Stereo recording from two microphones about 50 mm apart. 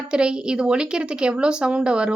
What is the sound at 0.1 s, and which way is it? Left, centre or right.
A woman's voice, centre.